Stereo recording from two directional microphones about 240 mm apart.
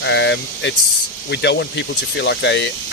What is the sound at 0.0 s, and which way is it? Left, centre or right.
Speech, left.